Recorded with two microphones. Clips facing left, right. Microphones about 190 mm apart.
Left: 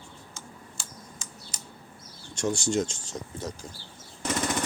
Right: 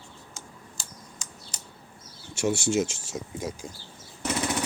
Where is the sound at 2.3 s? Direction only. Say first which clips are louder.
Right 2 dB; 5° right (ahead or behind).